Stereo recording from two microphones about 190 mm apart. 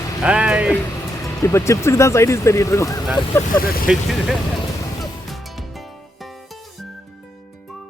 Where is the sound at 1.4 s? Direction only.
15° left (ahead or behind).